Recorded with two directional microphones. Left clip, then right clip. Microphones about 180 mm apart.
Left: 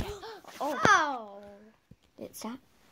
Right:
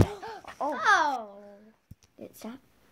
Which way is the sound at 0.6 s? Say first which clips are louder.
Right 1 dB; 40° left (ahead or behind).